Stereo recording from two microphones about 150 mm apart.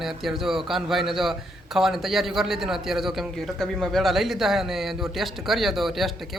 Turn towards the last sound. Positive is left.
turn(degrees=0)  # may be behind; listen again after turning